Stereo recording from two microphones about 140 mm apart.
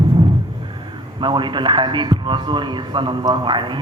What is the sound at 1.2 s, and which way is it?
Speech, 35° right (ahead or behind).